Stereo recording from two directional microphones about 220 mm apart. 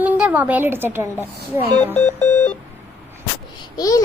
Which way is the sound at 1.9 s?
10° left (ahead or behind).